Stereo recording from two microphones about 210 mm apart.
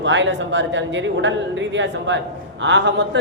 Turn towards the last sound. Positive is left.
turn(degrees=-55)  # may be behind; listen again after turning